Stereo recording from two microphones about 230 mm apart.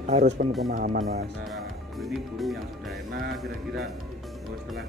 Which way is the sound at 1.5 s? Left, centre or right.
Centre.